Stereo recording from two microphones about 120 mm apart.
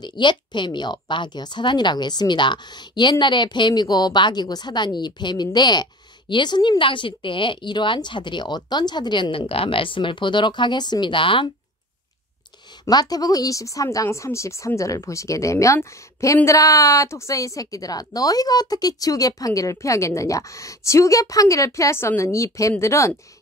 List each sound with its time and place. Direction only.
0.0 s speech: 40° left (ahead or behind)
12.8 s a woman's voice: 30° left (ahead or behind)